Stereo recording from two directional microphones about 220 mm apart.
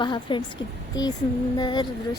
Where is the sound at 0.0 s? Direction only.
20° left (ahead or behind).